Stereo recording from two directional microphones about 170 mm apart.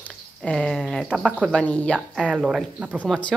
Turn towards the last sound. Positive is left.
turn(degrees=5)  # may be behind; listen again after turning